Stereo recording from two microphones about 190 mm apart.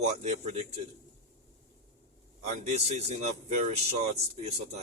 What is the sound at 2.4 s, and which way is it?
Speech, 35° right (ahead or behind).